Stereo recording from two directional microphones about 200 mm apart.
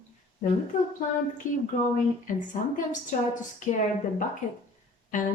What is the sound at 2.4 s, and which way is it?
Speech, 40° left (ahead or behind).